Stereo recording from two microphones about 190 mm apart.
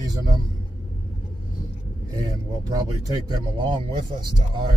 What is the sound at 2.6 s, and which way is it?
Speech, 20° right (ahead or behind).